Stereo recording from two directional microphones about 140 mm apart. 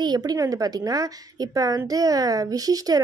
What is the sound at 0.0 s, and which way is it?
Speech, 30° right (ahead or behind).